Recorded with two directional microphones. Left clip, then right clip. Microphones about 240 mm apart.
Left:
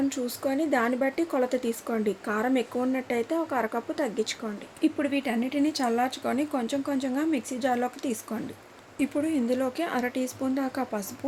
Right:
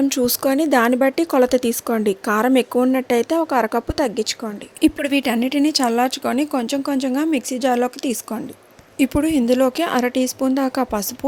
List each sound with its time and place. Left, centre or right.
0.1 s speech: right